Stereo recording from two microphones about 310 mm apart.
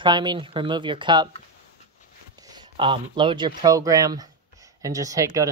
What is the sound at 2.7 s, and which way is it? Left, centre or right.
Speech, centre.